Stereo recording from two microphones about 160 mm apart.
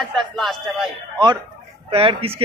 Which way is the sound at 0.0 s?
Centre (ahead or behind).